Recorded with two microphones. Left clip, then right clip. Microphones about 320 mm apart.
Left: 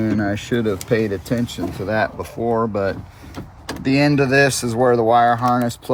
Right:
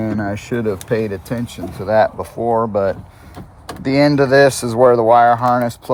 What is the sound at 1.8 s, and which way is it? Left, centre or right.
Speech, right.